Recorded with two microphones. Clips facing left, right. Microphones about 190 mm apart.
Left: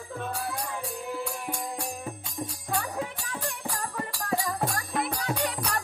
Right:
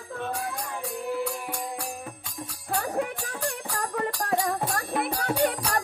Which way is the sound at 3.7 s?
65° right (ahead or behind).